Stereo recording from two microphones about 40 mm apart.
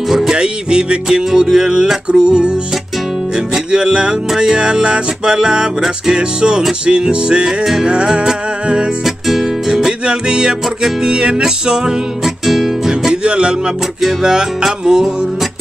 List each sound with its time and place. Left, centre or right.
0.3 s music: right
3.7 s music: right
9.7 s music: centre
12.4 s music: centre
13.1 s music: right